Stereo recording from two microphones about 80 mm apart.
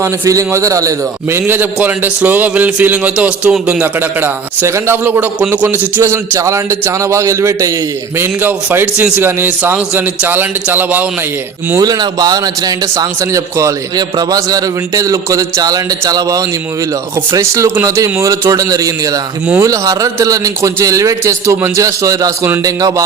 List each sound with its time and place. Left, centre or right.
0.0 s a man's voice: right
1.5 s a man's voice: right
4.6 s a man's voice: right
6.0 s a man's voice: right
8.2 s a man's voice: right
11.8 s a man's voice: right
14.3 s a man's voice: right